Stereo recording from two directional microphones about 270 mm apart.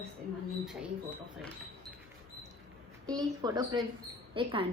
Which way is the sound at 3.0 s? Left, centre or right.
Centre.